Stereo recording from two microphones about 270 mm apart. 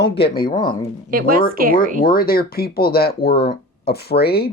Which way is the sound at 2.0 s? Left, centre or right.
Left.